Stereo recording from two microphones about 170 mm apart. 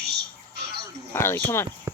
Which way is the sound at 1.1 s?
15° left (ahead or behind).